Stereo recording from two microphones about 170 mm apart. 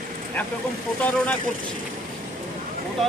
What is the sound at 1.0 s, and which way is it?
Speech, 5° left (ahead or behind).